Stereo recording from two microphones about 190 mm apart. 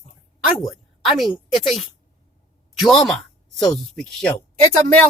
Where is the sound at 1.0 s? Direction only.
Centre (ahead or behind).